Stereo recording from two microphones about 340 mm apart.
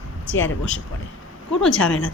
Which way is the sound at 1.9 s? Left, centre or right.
Left.